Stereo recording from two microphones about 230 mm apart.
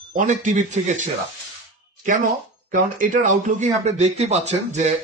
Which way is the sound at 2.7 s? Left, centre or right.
Right.